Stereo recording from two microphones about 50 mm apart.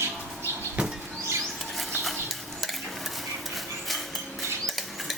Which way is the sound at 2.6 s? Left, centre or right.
Centre.